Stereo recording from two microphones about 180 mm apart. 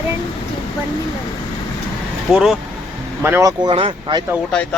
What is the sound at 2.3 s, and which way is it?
Speech, 5° right (ahead or behind).